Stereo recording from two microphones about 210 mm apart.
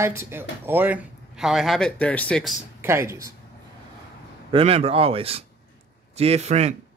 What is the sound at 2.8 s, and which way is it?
Speech, 10° right (ahead or behind).